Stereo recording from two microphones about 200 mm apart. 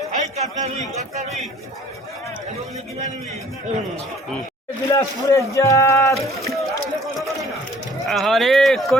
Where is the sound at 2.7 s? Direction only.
35° right (ahead or behind).